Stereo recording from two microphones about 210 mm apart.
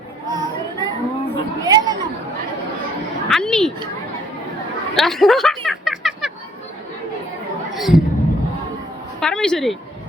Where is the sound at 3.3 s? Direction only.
5° left (ahead or behind).